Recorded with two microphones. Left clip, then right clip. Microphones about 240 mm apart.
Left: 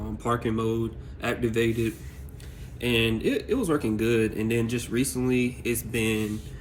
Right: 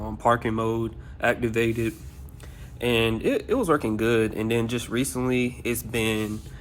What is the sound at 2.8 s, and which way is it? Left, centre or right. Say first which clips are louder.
Speech: right 2 dB; right.